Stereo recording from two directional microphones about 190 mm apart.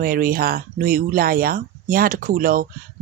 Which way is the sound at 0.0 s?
50° right (ahead or behind).